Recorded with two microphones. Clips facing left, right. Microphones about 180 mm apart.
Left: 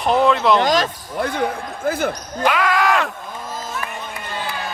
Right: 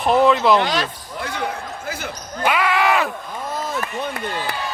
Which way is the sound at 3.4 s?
65° right (ahead or behind).